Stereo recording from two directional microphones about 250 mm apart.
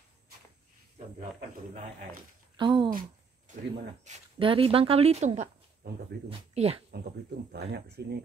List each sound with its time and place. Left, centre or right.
2.5 s speech: centre
4.0 s speech: right
5.8 s speech: right
6.2 s speech: right
7.5 s speech: right